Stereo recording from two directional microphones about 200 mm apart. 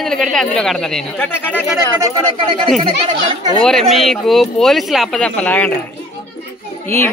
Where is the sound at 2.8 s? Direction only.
30° right (ahead or behind).